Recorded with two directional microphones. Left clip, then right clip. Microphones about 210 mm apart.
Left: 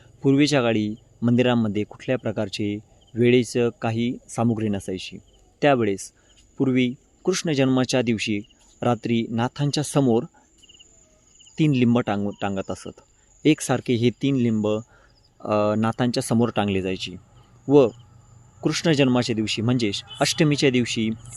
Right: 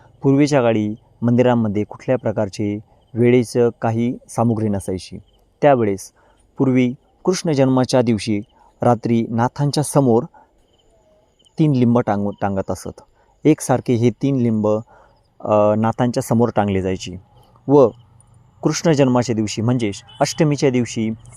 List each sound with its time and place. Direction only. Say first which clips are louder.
0.0 s a sound: right 3 dB; 15° right (ahead or behind)
0.5 s speech: right 5 dB; 10° right (ahead or behind)
11.5 s speech: right 4 dB; 20° right (ahead or behind)